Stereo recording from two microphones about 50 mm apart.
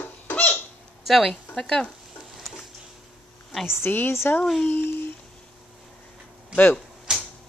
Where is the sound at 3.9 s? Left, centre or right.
Left.